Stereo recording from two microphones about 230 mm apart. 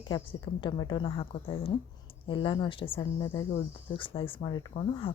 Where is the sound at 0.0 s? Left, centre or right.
Left.